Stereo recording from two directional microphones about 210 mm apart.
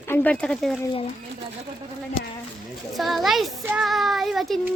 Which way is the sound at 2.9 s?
Centre (ahead or behind).